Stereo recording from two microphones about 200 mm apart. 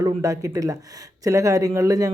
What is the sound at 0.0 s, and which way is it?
Speech, 15° right (ahead or behind).